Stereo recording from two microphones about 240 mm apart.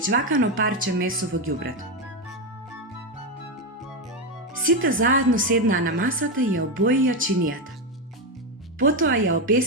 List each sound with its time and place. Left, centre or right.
0.1 s speech: right
4.6 s speech: right
8.8 s speech: right